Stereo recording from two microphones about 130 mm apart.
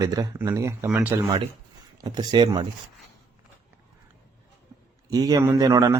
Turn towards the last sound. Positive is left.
turn(degrees=-25)  # may be behind; listen again after turning